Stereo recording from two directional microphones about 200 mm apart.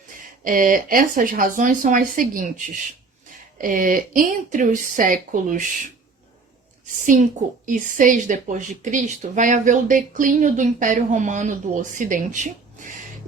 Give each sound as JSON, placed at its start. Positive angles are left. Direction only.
{"t": 0.1, "sound": "speech", "side_deg": -45}
{"t": 7.6, "sound": "speech", "side_deg": -40}